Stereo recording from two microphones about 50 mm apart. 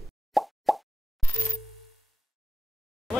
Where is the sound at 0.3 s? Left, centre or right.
Centre.